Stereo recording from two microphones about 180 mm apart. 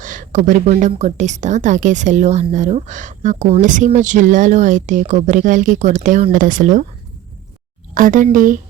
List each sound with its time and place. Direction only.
0.0 s a woman's voice: 45° right (ahead or behind)
7.9 s a woman's voice: 45° right (ahead or behind)